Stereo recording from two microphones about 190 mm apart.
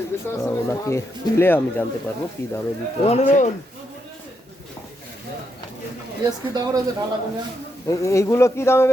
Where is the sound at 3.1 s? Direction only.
35° left (ahead or behind).